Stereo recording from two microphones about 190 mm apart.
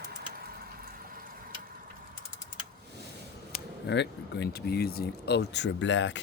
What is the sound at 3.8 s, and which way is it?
Speech, 65° left (ahead or behind).